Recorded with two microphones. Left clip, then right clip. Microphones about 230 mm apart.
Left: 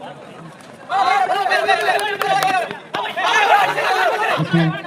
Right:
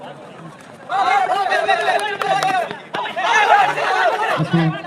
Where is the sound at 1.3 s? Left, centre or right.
Left.